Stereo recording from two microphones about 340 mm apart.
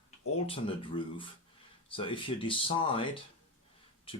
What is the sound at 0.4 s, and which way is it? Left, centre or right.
Speech, centre.